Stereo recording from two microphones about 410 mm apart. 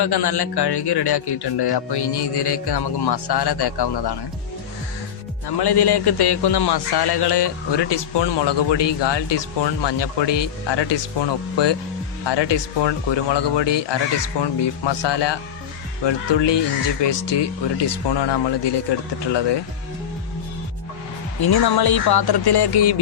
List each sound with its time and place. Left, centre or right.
0.0 s speech: left
5.5 s a man's voice: left
21.4 s speech: left